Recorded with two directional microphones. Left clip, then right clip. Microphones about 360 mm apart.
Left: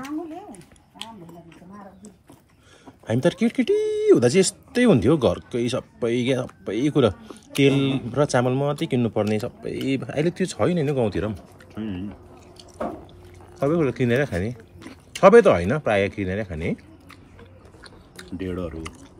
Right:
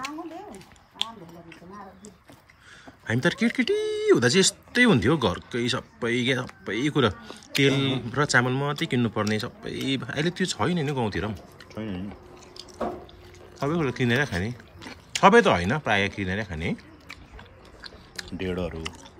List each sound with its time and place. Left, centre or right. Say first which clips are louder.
3.1 s speech: left 3 dB; centre
7.7 s a man's voice: left 3 dB; centre
8.1 s speech: left 1 dB; centre
13.6 s speech: left 5 dB; centre
18.1 s speech: even; right